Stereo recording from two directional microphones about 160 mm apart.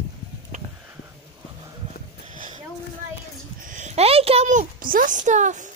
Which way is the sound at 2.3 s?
55° right (ahead or behind).